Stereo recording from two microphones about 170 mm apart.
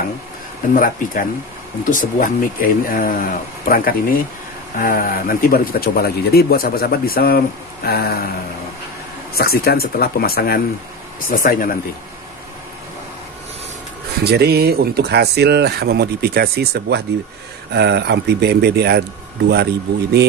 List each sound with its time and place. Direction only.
0.7 s speech: 55° left (ahead or behind)
9.3 s speech: 65° left (ahead or behind)
14.2 s speech: 70° right (ahead or behind)
17.7 s speech: 80° right